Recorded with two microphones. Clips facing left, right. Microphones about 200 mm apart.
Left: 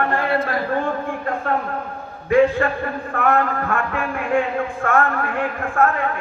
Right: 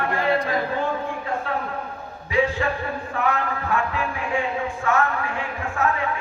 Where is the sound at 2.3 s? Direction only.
55° left (ahead or behind).